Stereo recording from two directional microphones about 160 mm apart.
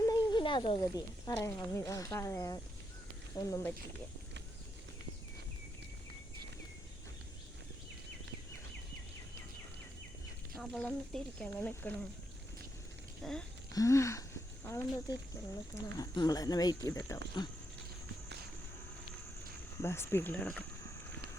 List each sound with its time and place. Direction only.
0.0 s snake: 25° left (ahead or behind)
0.8 s speech: 20° left (ahead or behind)
10.6 s speech: 5° left (ahead or behind)
13.2 s speech: centre (ahead or behind)
13.7 s a sound: 20° left (ahead or behind)
15.7 s speech: 25° left (ahead or behind)
19.8 s speech: 15° left (ahead or behind)